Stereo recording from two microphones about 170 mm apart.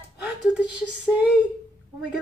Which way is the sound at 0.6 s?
5° right (ahead or behind).